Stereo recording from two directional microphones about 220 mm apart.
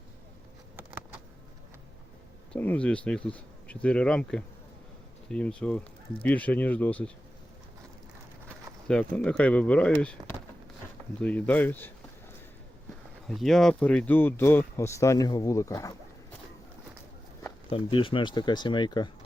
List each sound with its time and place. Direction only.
2.5 s speech: 5° left (ahead or behind)
8.9 s speech: 5° left (ahead or behind)
13.2 s speech: centre (ahead or behind)
17.7 s speech: 25° left (ahead or behind)